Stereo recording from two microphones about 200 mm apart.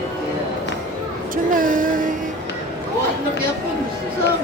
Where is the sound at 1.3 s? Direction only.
45° right (ahead or behind).